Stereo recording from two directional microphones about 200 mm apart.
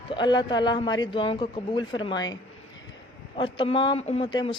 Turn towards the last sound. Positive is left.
turn(degrees=25)  # may be behind; listen again after turning